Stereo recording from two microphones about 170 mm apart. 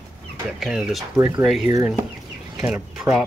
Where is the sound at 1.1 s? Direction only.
20° right (ahead or behind).